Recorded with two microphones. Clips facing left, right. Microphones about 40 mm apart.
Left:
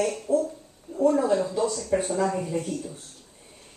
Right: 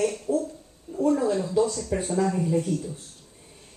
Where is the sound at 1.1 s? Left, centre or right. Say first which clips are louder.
Even; centre.